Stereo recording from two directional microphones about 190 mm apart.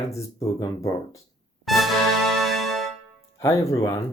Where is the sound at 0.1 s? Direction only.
15° left (ahead or behind).